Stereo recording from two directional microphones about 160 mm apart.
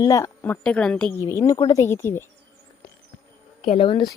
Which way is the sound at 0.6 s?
5° left (ahead or behind).